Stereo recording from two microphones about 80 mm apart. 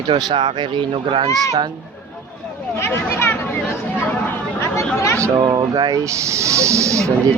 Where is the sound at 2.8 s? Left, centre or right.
Left.